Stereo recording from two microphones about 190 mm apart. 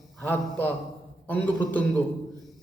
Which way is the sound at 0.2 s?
10° left (ahead or behind).